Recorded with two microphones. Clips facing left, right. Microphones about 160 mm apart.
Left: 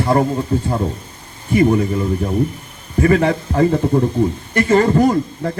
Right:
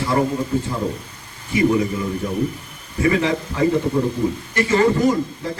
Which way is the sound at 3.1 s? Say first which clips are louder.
Left 5 dB; 50° left (ahead or behind).